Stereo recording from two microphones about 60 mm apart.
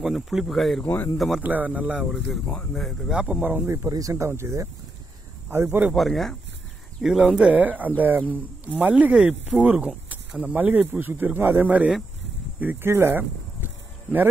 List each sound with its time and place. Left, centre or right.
0.0 s speech: centre
0.8 s speech: left
1.1 s speech: centre
1.4 s speech: right
2.7 s speech: centre
3.1 s speech: right
3.6 s speech: right
4.3 s speech: right
5.9 s speech: centre
7.6 s speech: right
12.8 s speech: right